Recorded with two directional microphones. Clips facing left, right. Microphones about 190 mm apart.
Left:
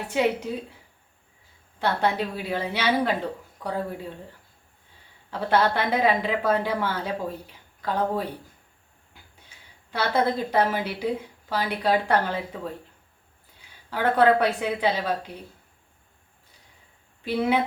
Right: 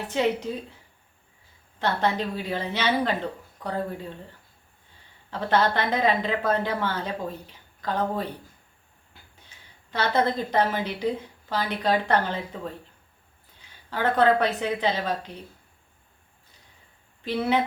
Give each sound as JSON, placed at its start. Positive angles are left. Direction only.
{"t": 0.1, "sound": "a woman's voice", "side_deg": 10}
{"t": 1.8, "sound": "a woman's voice", "side_deg": 10}
{"t": 5.3, "sound": "a woman's voice", "side_deg": 10}
{"t": 9.9, "sound": "a woman's voice", "side_deg": 10}
{"t": 17.2, "sound": "a woman's voice", "side_deg": 10}